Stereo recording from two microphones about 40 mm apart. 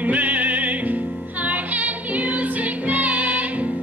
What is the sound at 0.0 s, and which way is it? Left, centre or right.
Music, right.